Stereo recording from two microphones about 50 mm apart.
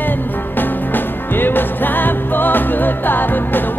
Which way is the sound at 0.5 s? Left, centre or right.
Left.